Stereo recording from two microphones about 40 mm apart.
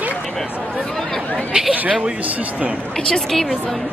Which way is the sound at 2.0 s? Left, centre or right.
Right.